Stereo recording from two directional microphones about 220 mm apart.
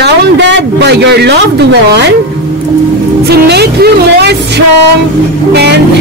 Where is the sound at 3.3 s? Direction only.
45° right (ahead or behind).